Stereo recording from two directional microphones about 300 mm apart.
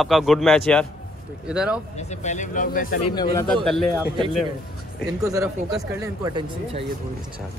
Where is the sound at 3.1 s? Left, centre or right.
Centre.